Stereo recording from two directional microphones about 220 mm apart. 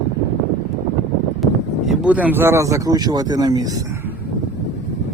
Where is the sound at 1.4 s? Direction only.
5° right (ahead or behind).